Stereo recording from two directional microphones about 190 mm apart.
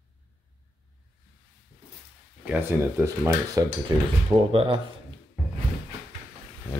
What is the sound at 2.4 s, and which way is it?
Speech, 10° right (ahead or behind).